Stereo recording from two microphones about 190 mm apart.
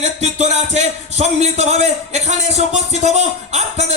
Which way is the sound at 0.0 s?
35° right (ahead or behind).